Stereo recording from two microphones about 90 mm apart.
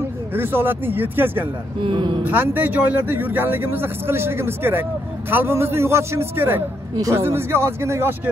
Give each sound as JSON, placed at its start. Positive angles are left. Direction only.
{"t": 0.3, "sound": "speech", "side_deg": -25}
{"t": 1.8, "sound": "speech", "side_deg": -65}
{"t": 2.2, "sound": "speech", "side_deg": -20}